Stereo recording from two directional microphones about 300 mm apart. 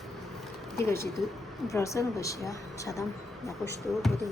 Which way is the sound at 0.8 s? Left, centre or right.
Centre.